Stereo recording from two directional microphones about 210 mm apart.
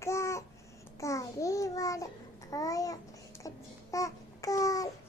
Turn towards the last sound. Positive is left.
turn(degrees=15)  # may be behind; listen again after turning